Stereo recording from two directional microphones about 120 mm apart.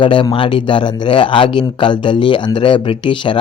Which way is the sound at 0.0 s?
45° left (ahead or behind).